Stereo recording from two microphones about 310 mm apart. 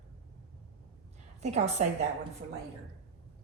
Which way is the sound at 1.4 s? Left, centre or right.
Right.